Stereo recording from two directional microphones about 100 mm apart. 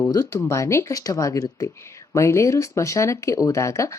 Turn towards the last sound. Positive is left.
turn(degrees=30)  # may be behind; listen again after turning